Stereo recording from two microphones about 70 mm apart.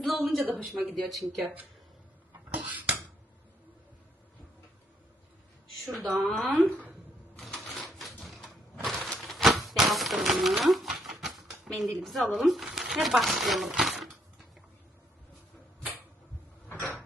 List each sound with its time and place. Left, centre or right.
0.0 s speech: centre
2.5 s a sound: right
5.8 s speech: centre
6.6 s speech: right
7.3 s typewriter: centre
7.9 s a sound: centre
16.6 s cupboard open or close: left